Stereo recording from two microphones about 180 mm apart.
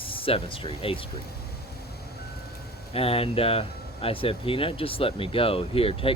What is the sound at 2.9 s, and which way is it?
Speech, 30° left (ahead or behind).